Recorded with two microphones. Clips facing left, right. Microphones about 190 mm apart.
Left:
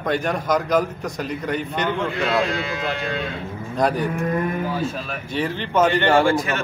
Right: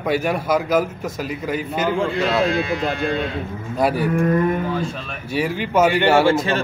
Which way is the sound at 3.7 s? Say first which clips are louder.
Right 1 dB; 5° right (ahead or behind).